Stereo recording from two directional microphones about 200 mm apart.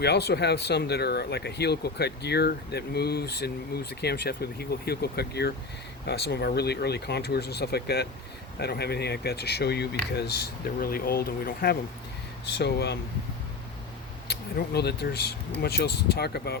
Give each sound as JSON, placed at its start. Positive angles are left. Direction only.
{"t": 0.0, "sound": "speech", "side_deg": 55}
{"t": 14.3, "sound": "speech", "side_deg": 55}